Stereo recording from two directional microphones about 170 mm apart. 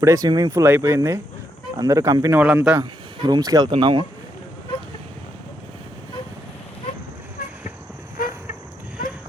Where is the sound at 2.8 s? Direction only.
25° right (ahead or behind).